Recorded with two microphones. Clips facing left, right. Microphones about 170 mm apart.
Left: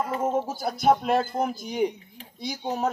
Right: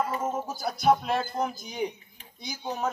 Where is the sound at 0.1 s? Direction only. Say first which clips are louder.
Left 5 dB; 55° left (ahead or behind).